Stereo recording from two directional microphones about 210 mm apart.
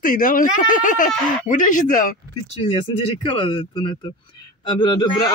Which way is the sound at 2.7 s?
25° left (ahead or behind).